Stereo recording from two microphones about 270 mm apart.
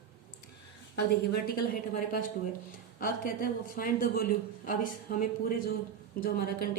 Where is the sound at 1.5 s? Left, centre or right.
Left.